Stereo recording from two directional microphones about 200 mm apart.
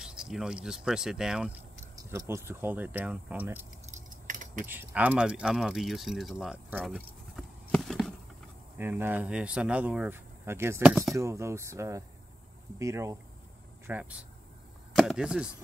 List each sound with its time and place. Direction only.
0.0 s speech: 5° right (ahead or behind)
3.8 s keys jangling: 40° right (ahead or behind)
4.6 s speech: 10° right (ahead or behind)
8.7 s speech: 10° right (ahead or behind)